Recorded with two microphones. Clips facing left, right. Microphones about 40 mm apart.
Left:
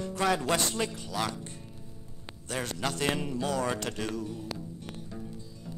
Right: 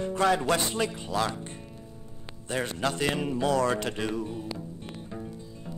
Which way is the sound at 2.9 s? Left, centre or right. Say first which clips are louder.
Right 2 dB; centre.